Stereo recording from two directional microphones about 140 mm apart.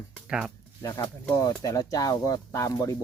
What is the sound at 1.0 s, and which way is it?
Speech, 30° left (ahead or behind).